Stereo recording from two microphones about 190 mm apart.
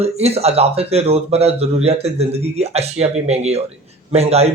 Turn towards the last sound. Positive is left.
turn(degrees=-35)  # may be behind; listen again after turning